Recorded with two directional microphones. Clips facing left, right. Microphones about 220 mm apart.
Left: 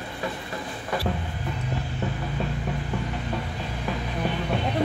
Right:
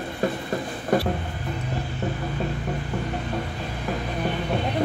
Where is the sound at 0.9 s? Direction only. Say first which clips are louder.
Right 7 dB; 45° right (ahead or behind).